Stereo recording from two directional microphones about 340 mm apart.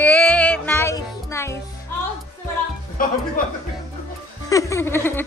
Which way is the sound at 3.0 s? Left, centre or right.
Left.